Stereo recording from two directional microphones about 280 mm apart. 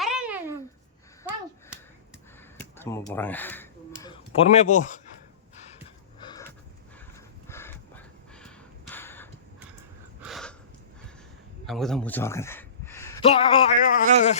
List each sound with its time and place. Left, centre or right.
0.0 s a sound: centre
2.7 s speech: centre
4.0 s a man's voice: centre
7.4 s a sound: centre
10.2 s gasp: centre
11.6 s a man's voice: centre; by 14.3 s left